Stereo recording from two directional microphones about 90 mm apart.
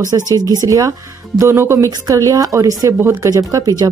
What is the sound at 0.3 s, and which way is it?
Speech, 45° right (ahead or behind).